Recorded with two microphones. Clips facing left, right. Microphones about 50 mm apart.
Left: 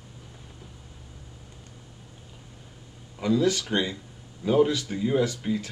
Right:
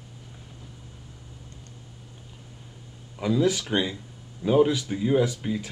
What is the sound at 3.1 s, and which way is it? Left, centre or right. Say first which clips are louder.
Speech: even; centre.